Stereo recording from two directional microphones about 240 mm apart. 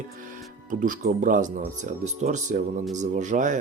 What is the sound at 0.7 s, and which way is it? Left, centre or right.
Speech, right.